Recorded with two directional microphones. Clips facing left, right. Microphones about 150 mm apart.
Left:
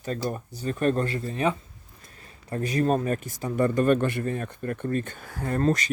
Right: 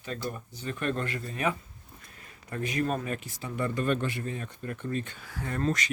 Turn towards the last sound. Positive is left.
turn(degrees=40)  # may be behind; listen again after turning